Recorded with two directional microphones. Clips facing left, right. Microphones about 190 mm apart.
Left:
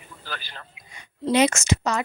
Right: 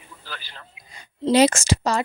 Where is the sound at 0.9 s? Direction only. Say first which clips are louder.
Right 3 dB; 35° right (ahead or behind).